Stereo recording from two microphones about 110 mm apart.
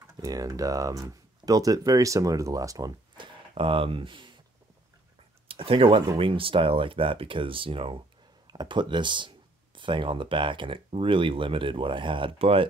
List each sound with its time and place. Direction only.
0.2 s speech: 30° right (ahead or behind)
3.2 s speech: 55° right (ahead or behind)
5.5 s speech: 55° right (ahead or behind)
8.5 s speech: 40° right (ahead or behind); by 12.6 s 60° right (ahead or behind)